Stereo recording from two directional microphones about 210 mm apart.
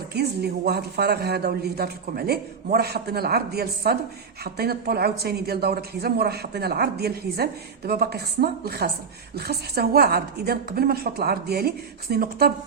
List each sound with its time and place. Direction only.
0.1 s a woman's voice: 50° right (ahead or behind)